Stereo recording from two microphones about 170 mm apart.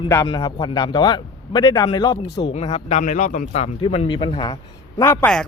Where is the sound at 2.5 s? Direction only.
40° left (ahead or behind).